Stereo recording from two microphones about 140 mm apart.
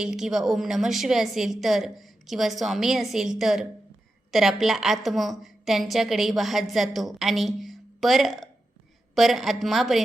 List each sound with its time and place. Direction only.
0.0 s a woman's voice: 5° right (ahead or behind)